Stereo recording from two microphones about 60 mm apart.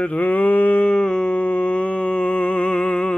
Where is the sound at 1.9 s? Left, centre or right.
Centre.